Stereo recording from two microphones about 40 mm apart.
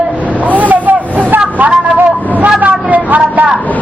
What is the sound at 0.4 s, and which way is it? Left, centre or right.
Vehicle, right.